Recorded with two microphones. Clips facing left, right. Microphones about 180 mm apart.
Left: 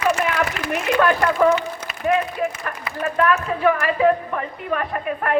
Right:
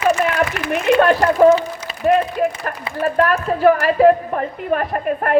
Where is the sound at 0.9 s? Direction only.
30° right (ahead or behind).